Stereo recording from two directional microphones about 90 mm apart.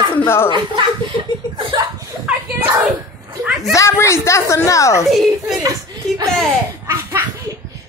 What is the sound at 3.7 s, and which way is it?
A woman's voice, 35° left (ahead or behind).